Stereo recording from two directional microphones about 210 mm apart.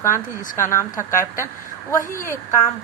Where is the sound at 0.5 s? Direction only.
10° left (ahead or behind).